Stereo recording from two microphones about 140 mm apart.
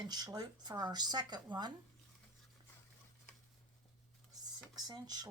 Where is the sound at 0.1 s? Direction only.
30° right (ahead or behind).